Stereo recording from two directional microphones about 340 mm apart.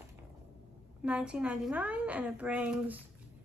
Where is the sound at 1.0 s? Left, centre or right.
Centre.